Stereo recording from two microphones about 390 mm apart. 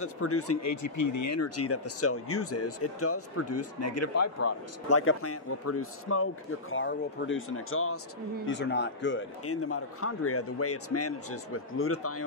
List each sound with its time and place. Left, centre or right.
0.0 s speech: left